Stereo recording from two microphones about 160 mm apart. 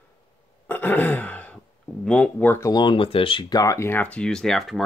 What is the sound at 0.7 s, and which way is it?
Throat clearing, 10° left (ahead or behind).